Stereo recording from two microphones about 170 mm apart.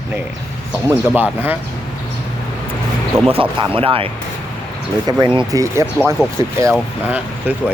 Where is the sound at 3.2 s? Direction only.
35° right (ahead or behind).